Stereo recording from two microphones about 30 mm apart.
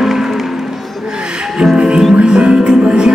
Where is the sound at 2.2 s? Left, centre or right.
Right.